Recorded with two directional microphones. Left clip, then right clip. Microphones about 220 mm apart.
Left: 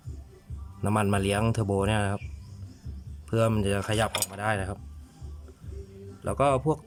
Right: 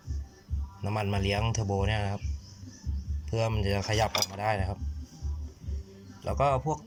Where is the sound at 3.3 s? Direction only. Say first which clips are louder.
Left 4 dB; 20° left (ahead or behind).